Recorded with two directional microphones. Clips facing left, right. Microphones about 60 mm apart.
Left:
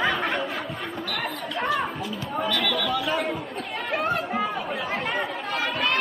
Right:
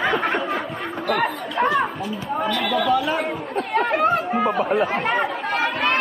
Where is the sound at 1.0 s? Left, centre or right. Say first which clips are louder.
Right 11 dB; right.